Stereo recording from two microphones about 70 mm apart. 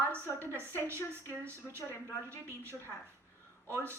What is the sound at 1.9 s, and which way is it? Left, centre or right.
Speech, left.